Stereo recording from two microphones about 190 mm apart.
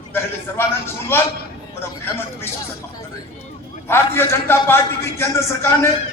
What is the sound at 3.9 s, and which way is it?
A man's voice, 15° left (ahead or behind).